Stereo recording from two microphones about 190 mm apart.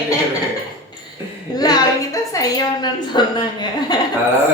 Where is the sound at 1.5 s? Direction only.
20° left (ahead or behind).